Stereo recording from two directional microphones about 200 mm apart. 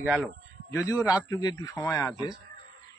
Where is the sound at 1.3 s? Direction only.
15° left (ahead or behind).